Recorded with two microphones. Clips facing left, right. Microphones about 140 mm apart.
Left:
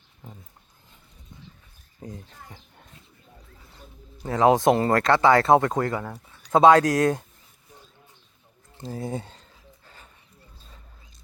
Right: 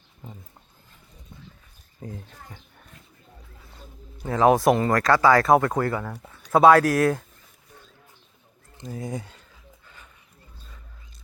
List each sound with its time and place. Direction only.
2.0 s speech: 30° left (ahead or behind)
4.4 s speech: 20° left (ahead or behind)
8.8 s speech: 30° left (ahead or behind)
9.8 s dog: 35° left (ahead or behind)